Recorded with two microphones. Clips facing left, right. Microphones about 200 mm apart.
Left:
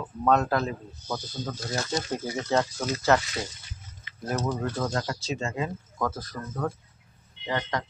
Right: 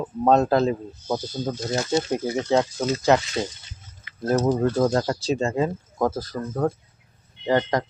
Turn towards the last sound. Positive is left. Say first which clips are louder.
# right 8 dB
turn(degrees=-40)  # may be behind; listen again after turning